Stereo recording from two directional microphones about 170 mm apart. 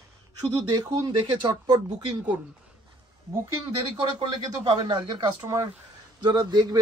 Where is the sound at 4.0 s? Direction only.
35° right (ahead or behind).